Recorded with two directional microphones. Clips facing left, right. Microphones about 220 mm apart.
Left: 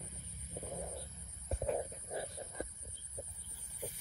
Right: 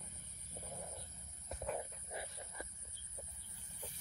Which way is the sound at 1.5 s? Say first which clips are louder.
Left 6 dB; 25° left (ahead or behind).